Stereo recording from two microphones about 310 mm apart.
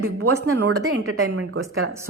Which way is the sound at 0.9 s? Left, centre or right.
Right.